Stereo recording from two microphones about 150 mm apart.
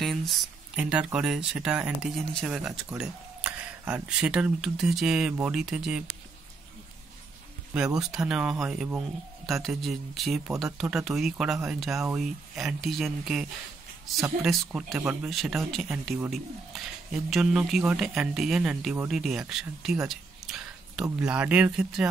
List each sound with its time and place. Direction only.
0.0 s speech: centre (ahead or behind)
7.7 s speech: 5° right (ahead or behind)
20.1 s a sound: 5° right (ahead or behind)
21.2 s speech: 10° right (ahead or behind)